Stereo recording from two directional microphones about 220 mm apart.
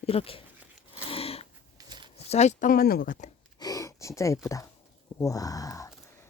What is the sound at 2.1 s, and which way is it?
Speech, 30° left (ahead or behind).